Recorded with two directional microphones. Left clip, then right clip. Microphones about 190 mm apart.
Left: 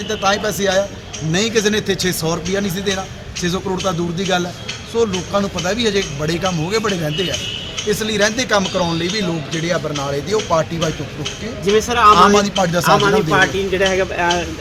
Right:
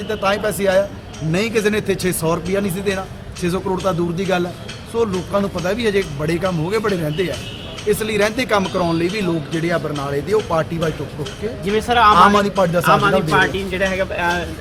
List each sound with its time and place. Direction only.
0.1 s a man's voice: 5° right (ahead or behind)
11.7 s speech: 40° left (ahead or behind)
12.1 s a man's voice: 5° right (ahead or behind)
12.9 s a man's voice: 45° left (ahead or behind)